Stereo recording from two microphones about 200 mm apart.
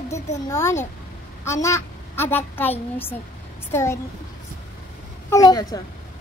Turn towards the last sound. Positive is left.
turn(degrees=20)  # may be behind; listen again after turning